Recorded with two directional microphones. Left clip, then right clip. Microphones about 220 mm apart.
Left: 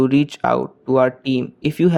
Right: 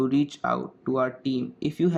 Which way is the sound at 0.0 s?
40° left (ahead or behind).